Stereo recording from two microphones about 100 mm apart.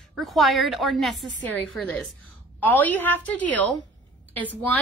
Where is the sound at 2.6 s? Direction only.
15° left (ahead or behind).